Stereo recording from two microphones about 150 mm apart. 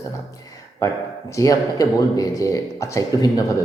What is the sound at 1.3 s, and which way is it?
A man's voice, 20° left (ahead or behind).